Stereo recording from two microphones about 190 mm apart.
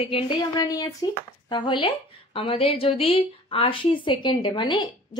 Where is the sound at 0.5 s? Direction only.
20° left (ahead or behind).